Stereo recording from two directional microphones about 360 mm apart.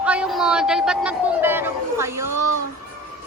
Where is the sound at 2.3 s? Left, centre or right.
Right.